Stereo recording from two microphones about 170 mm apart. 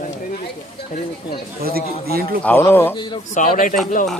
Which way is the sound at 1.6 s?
60° right (ahead or behind).